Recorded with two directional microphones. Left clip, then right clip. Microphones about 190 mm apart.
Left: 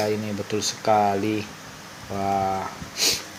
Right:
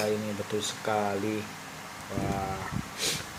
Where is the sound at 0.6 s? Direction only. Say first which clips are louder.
Left 11 dB; 40° left (ahead or behind).